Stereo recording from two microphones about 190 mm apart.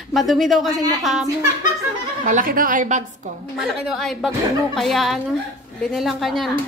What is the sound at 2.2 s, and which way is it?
A woman's voice, 45° right (ahead or behind).